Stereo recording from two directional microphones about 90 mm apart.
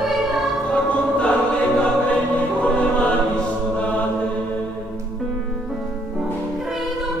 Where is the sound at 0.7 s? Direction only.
10° left (ahead or behind).